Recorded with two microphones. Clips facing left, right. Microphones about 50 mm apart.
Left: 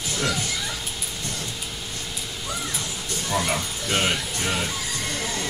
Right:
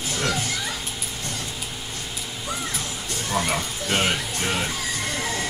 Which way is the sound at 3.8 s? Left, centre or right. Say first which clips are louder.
Right 1 dB; right.